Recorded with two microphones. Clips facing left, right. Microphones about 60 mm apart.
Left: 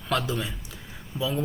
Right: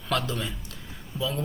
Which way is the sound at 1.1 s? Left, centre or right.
Left.